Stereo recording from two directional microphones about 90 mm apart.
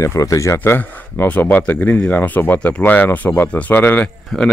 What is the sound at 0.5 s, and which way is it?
Speech, 20° left (ahead or behind).